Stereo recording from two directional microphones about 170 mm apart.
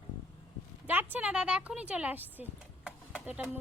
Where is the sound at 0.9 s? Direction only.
10° right (ahead or behind).